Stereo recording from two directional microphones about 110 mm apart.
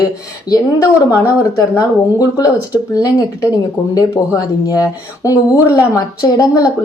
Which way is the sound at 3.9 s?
35° left (ahead or behind).